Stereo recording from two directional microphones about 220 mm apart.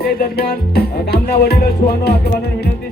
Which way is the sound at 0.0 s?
45° left (ahead or behind).